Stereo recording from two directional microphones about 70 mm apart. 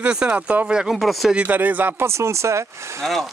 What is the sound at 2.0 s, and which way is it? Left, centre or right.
Speech, right.